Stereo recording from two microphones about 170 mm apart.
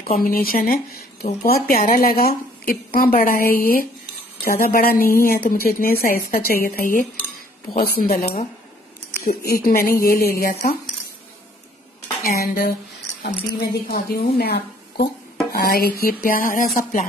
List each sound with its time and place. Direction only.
0.2 s speech: 60° left (ahead or behind)
8.2 s speech: 40° left (ahead or behind)
9.2 s speech: 65° left (ahead or behind)
12.2 s speech: 60° left (ahead or behind)